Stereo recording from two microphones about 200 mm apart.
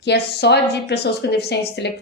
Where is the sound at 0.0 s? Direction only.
55° left (ahead or behind).